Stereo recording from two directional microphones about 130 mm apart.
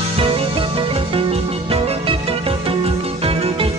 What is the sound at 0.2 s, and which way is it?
Music, 45° right (ahead or behind).